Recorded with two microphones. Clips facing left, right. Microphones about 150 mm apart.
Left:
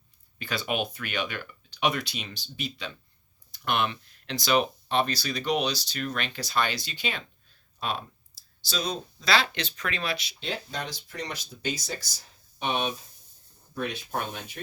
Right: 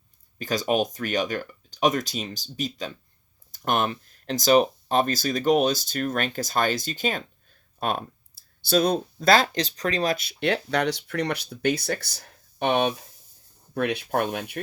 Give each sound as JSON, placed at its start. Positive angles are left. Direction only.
{"t": 0.3, "sound": "speech", "side_deg": -40}